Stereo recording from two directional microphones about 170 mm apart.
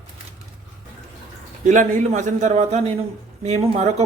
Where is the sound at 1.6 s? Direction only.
45° right (ahead or behind).